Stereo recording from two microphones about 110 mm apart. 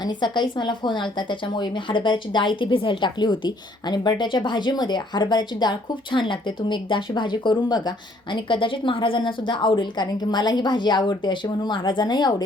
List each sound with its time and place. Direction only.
0.0 s a woman's voice: 45° left (ahead or behind)